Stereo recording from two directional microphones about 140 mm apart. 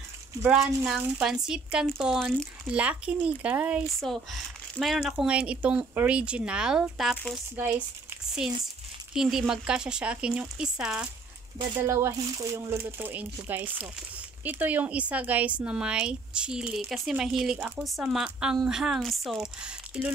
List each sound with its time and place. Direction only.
0.4 s speech: 5° right (ahead or behind)
9.1 s speech: 5° right (ahead or behind)
11.8 s speech: 20° right (ahead or behind)